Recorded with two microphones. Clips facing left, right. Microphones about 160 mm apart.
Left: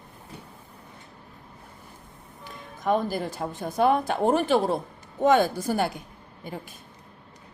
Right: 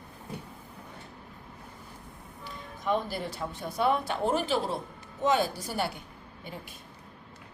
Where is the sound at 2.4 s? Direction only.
45° left (ahead or behind).